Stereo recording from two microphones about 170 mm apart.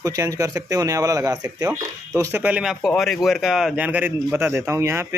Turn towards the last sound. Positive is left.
turn(degrees=-15)  # may be behind; listen again after turning